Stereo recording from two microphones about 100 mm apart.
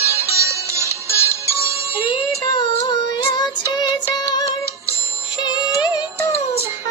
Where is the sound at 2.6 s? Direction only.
45° left (ahead or behind).